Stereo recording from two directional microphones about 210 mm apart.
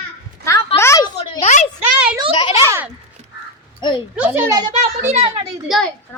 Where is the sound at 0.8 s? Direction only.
15° left (ahead or behind).